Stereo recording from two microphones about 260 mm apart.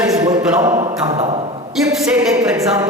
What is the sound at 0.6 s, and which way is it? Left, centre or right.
Speech, centre.